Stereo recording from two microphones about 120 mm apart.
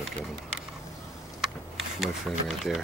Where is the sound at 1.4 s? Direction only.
Centre (ahead or behind).